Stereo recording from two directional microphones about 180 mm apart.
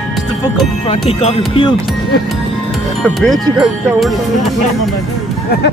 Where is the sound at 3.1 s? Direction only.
Centre (ahead or behind).